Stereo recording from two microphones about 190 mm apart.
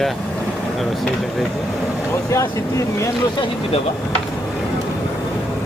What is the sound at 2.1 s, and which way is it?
Speech, 15° left (ahead or behind).